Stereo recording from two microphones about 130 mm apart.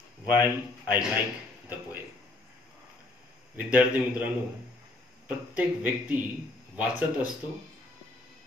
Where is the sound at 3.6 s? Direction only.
10° right (ahead or behind).